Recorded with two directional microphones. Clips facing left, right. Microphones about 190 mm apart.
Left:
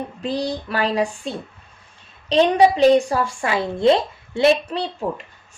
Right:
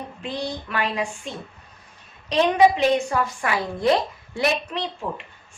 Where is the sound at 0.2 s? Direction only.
35° left (ahead or behind).